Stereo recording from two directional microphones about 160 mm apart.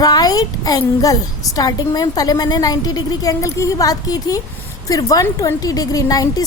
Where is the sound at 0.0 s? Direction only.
25° left (ahead or behind).